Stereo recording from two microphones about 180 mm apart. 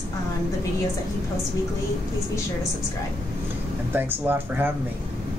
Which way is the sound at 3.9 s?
10° right (ahead or behind).